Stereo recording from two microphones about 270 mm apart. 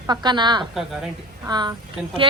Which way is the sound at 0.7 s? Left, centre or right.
Centre.